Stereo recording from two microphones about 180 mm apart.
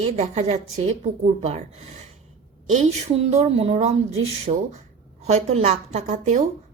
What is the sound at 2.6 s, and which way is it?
A woman's voice, 40° right (ahead or behind).